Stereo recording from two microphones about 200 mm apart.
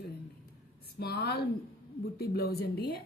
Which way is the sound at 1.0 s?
50° left (ahead or behind).